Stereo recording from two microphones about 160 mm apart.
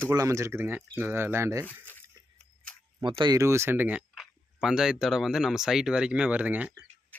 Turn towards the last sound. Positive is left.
turn(degrees=-10)  # may be behind; listen again after turning